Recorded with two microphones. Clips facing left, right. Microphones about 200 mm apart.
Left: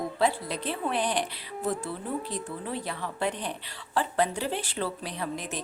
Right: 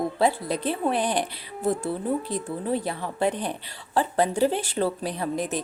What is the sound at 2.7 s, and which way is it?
Speech, 45° right (ahead or behind).